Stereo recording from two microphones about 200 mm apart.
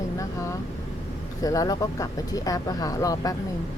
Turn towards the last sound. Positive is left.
turn(degrees=15)  # may be behind; listen again after turning